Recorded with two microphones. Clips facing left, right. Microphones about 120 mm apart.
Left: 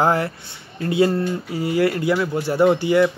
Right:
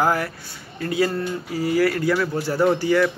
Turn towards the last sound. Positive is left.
turn(degrees=20)  # may be behind; listen again after turning